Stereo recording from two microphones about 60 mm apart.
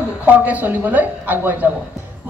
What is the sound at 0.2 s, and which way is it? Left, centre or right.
Speech, right.